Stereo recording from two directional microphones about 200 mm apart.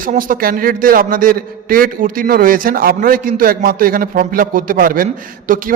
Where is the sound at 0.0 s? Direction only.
45° right (ahead or behind).